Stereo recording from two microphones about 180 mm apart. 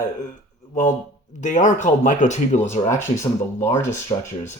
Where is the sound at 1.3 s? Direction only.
45° left (ahead or behind).